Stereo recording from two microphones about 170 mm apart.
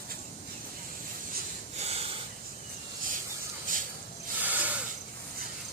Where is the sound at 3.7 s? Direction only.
55° right (ahead or behind).